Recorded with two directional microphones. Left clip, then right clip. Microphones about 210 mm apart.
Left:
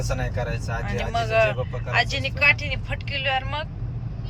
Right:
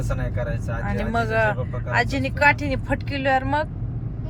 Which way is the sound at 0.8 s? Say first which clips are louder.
Right 2 dB; 25° right (ahead or behind).